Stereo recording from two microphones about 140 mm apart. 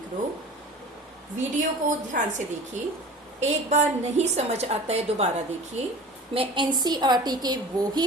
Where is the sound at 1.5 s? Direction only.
65° right (ahead or behind).